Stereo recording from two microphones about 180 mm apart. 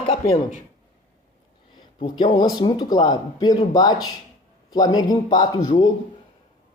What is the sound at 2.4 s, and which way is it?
Speech, 25° left (ahead or behind).